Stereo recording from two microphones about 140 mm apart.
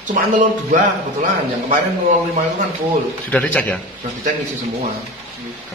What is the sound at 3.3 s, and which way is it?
Speech, 10° left (ahead or behind).